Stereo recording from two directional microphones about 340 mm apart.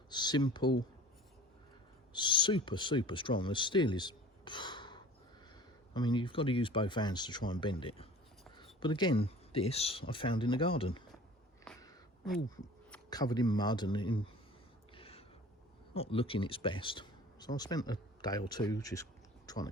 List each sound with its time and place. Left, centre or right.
0.1 s speech: centre
2.1 s speech: centre
11.6 s a sound: centre
12.9 s speech: centre
14.9 s a sound: centre
16.0 s speech: centre